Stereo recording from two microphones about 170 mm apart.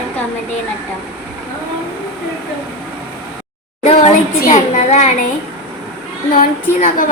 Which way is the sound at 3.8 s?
40° left (ahead or behind).